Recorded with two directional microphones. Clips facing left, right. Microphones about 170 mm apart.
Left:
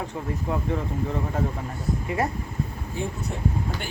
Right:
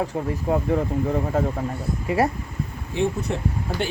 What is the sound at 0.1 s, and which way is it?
Speech, 35° right (ahead or behind).